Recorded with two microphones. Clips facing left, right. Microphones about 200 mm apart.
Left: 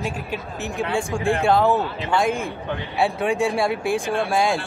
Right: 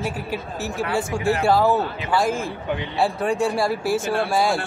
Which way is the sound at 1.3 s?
5° right (ahead or behind).